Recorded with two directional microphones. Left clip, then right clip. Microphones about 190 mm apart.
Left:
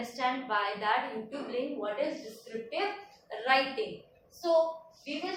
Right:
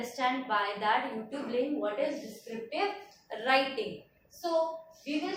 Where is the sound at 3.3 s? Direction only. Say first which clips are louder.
Even; 10° right (ahead or behind).